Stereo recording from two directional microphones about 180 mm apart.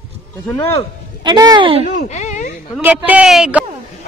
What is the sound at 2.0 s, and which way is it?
Speech, 40° left (ahead or behind).